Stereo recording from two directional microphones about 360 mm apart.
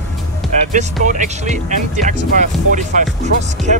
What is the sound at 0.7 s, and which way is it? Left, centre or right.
Speech, centre.